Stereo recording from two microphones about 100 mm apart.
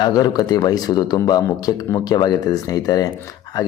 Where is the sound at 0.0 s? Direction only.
40° left (ahead or behind).